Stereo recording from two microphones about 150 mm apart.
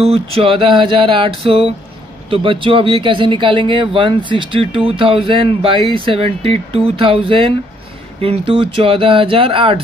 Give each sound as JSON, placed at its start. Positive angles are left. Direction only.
{"t": 0.0, "sound": "speech", "side_deg": -40}